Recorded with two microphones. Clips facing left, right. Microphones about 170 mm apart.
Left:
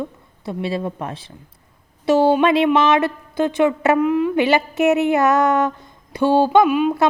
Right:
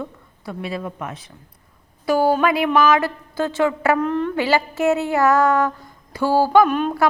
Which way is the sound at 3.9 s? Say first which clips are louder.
Left 4 dB; 10° left (ahead or behind).